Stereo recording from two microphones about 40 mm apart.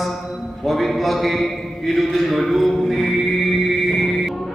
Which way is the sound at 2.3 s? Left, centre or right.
Centre.